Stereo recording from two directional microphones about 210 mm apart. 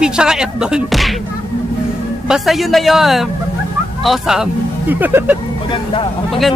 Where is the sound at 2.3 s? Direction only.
Centre (ahead or behind).